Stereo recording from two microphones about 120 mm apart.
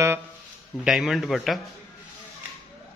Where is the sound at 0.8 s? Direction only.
Centre (ahead or behind).